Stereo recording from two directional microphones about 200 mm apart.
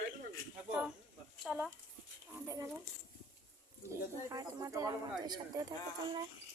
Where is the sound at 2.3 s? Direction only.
15° right (ahead or behind).